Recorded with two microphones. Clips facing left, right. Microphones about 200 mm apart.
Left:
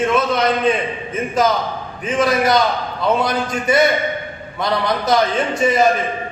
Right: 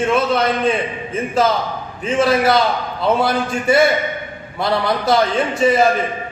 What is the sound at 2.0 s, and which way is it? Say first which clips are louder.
A man's voice: right 2 dB; 25° right (ahead or behind).